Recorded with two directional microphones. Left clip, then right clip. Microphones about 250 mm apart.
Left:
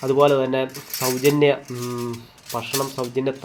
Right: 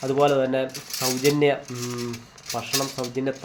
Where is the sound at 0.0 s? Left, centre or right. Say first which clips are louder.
Left 3 dB; centre.